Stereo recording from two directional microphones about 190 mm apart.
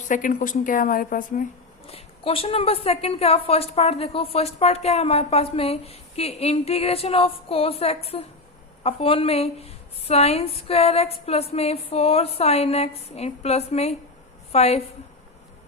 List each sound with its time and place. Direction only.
0.1 s speech: 45° left (ahead or behind)
1.9 s a woman's voice: 30° left (ahead or behind)